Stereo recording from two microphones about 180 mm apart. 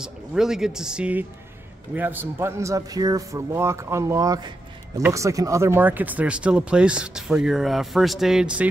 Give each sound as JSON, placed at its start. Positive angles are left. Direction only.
{"t": 0.0, "sound": "a man's voice", "side_deg": -5}